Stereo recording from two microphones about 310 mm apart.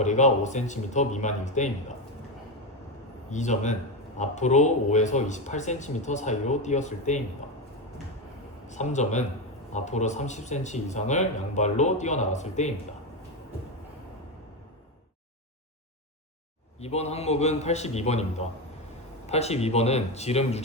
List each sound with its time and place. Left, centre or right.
0.0 s speech: left
3.2 s speech: left
8.6 s speech: left
16.8 s speech: left